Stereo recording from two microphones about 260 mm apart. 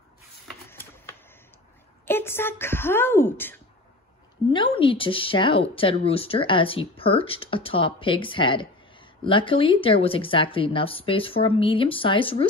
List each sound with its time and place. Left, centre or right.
0.5 s a sound: centre
2.0 s speech: centre
4.5 s a woman's voice: centre